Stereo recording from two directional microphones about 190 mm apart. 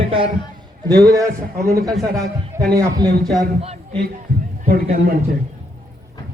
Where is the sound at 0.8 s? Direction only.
20° right (ahead or behind).